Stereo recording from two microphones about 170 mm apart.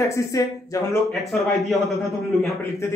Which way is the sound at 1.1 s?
Centre (ahead or behind).